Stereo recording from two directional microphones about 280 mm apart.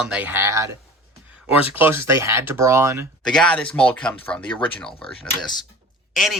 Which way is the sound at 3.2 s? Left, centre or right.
Centre.